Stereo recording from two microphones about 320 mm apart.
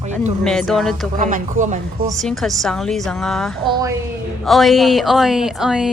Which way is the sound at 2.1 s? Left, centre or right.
Centre.